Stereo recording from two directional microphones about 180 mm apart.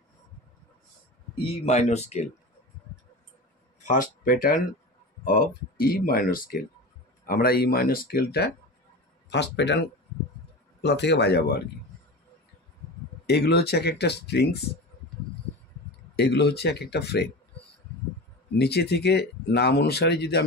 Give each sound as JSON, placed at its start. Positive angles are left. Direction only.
{"t": 1.4, "sound": "speech", "side_deg": 40}
{"t": 3.8, "sound": "speech", "side_deg": 45}
{"t": 9.3, "sound": "speech", "side_deg": 75}
{"t": 10.8, "sound": "speech", "side_deg": 70}
{"t": 13.3, "sound": "speech", "side_deg": 65}
{"t": 16.2, "sound": "speech", "side_deg": 65}
{"t": 18.6, "sound": "speech", "side_deg": 65}